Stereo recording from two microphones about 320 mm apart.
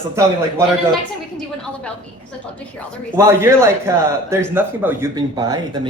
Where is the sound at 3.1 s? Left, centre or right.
Centre.